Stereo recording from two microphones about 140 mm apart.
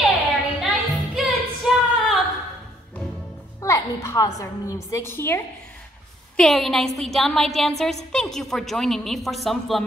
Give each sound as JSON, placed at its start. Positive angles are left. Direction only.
{"t": 0.6, "sound": "music", "side_deg": 0}
{"t": 3.6, "sound": "music", "side_deg": 20}
{"t": 4.4, "sound": "a woman's voice", "side_deg": 25}
{"t": 6.3, "sound": "a woman's voice", "side_deg": 0}